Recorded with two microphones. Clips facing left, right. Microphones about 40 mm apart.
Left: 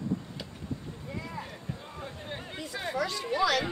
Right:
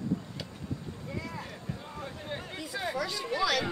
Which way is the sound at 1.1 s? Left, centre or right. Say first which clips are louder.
Even; centre.